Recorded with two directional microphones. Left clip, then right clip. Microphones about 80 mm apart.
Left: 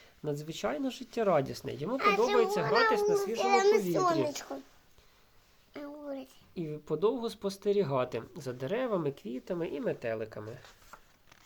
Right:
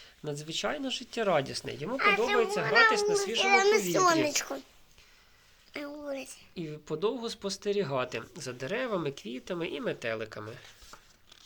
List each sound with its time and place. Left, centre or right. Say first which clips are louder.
0.3 s speech: right 1 dB; left
2.0 s speech: right 2 dB; left
2.2 s a child's voice: even; left
2.5 s speech: right 3 dB; left
3.4 s a child's voice: right 2 dB; centre
3.9 s speech: right 4 dB; right
4.2 s a woman's voice: right 4 dB; right
5.7 s a sound: right 4 dB; right
6.5 s speech: left 2 dB; left
9.6 s speech: right 1 dB; centre
10.4 s a child's voice: right 2 dB; centre